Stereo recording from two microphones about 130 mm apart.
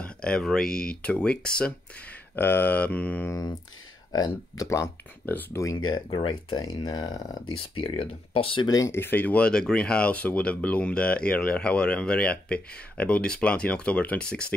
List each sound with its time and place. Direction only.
0.0 s speech: 5° left (ahead or behind)
4.6 s speech: 20° left (ahead or behind)
5.9 s speech: 40° left (ahead or behind)
7.5 s speech: 45° left (ahead or behind)
8.6 s speech: 25° left (ahead or behind); by 14.4 s 10° left (ahead or behind)